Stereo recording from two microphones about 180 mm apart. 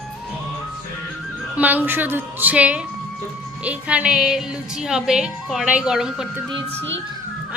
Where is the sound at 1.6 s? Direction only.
10° right (ahead or behind).